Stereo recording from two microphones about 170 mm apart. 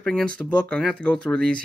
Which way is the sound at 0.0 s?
5° left (ahead or behind).